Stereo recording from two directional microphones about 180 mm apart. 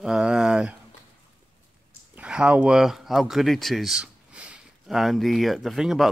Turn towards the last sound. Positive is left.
turn(degrees=0)  # may be behind; listen again after turning